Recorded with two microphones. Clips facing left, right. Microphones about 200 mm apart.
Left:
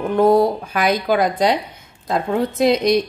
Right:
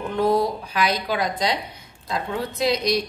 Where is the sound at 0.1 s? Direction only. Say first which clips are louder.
Left 6 dB; 45° left (ahead or behind).